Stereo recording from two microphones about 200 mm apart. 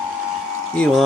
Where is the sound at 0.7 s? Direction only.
5° left (ahead or behind).